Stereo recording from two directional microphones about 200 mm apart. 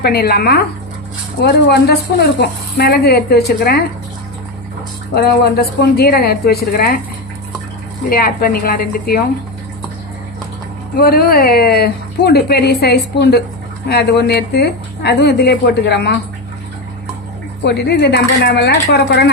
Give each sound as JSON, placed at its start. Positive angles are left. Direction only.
{"t": 0.0, "sound": "speech", "side_deg": 50}
{"t": 5.1, "sound": "speech", "side_deg": 55}
{"t": 8.1, "sound": "speech", "side_deg": 50}
{"t": 10.9, "sound": "speech", "side_deg": 50}
{"t": 17.6, "sound": "speech", "side_deg": 55}